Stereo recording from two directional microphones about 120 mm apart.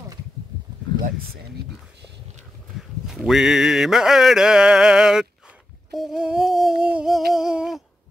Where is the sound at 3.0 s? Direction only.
Centre (ahead or behind).